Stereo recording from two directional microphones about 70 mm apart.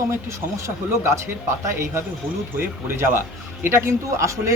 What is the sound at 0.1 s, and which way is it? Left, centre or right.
Speech, right.